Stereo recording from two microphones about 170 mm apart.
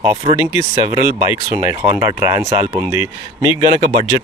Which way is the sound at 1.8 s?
15° right (ahead or behind).